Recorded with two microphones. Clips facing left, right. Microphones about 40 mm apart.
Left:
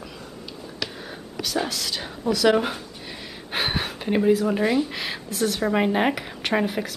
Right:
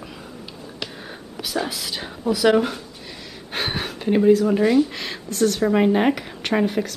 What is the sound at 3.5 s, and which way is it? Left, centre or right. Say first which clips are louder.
Speech: even; centre.